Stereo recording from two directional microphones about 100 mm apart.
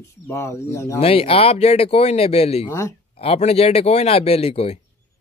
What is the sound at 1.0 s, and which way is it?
Speech, 85° left.